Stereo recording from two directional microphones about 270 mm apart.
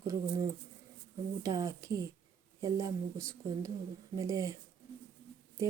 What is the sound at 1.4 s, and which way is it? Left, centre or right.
Speech, centre.